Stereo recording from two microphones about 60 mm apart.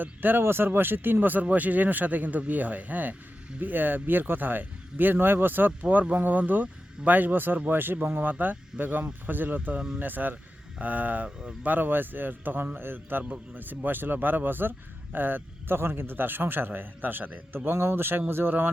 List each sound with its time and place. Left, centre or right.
0.0 s speech: right
9.7 s speech: centre
10.0 s speech: right
17.7 s speech: right